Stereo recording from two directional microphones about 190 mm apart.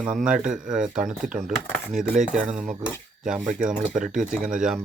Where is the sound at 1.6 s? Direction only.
10° left (ahead or behind).